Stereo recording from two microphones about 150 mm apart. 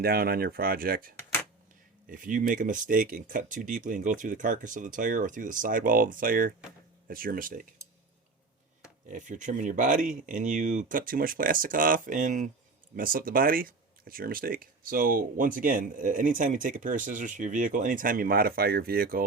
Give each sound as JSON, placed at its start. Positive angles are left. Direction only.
{"t": 0.0, "sound": "speech", "side_deg": -90}
{"t": 9.0, "sound": "speech", "side_deg": -60}
{"t": 13.0, "sound": "speech", "side_deg": -70}